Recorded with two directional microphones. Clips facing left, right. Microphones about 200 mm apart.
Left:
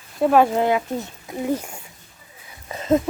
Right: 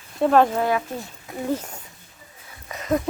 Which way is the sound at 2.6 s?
25° left (ahead or behind).